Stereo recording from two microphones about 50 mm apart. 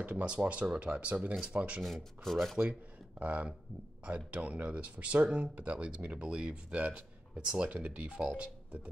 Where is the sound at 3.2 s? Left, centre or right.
Right.